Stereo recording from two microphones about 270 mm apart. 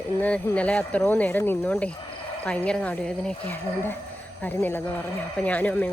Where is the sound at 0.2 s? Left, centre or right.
Centre.